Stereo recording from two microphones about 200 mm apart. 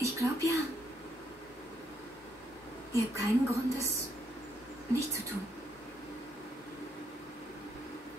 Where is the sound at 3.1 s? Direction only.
15° right (ahead or behind).